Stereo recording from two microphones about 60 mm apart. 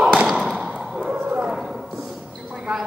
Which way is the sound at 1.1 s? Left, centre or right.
Centre.